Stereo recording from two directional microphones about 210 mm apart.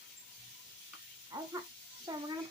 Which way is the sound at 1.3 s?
20° right (ahead or behind).